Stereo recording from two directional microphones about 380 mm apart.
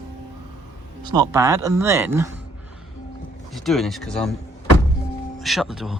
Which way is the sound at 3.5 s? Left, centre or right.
Centre.